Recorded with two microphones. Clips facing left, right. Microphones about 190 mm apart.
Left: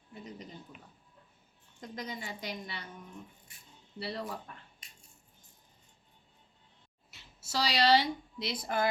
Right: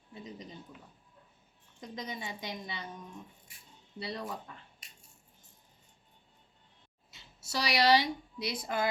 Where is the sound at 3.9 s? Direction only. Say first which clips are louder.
Left 1 dB; 20° right (ahead or behind).